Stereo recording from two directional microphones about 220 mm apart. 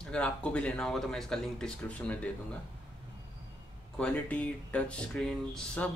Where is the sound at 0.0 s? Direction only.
5° left (ahead or behind).